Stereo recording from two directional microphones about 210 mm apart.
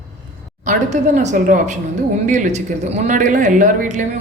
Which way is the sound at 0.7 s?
35° right (ahead or behind).